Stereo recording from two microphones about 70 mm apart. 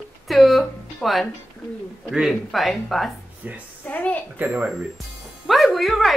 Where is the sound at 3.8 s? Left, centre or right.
Left.